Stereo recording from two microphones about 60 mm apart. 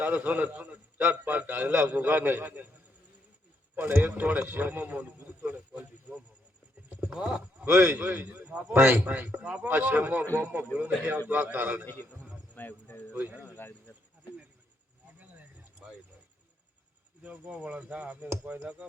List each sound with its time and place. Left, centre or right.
0.0 s a man's voice: right
3.8 s speech: right
4.2 s a sound: right
7.0 s speech: centre
7.6 s speech: right
8.7 s speech: right
9.0 s speech: right
11.9 s a man's voice: left
13.1 s speech: right
13.4 s speech: left
17.2 s speech: right